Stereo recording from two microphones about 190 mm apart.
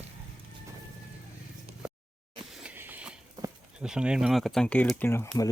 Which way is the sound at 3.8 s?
5° right (ahead or behind).